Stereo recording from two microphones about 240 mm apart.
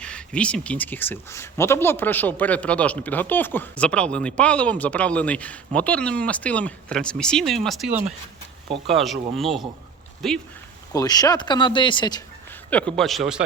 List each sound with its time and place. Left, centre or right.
0.0 s speech: centre
10.9 s speech: centre
12.7 s speech: centre